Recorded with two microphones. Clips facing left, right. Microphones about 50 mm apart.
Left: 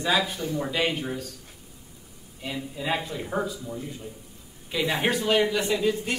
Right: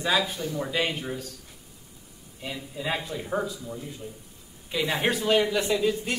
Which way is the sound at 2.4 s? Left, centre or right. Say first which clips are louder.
Left 2 dB; centre.